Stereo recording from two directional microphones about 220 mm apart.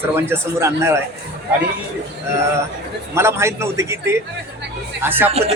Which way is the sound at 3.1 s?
10° right (ahead or behind).